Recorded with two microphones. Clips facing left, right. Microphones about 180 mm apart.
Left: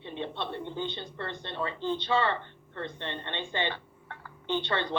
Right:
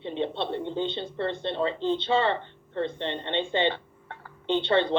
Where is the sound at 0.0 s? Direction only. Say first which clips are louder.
Right 6 dB; 25° right (ahead or behind).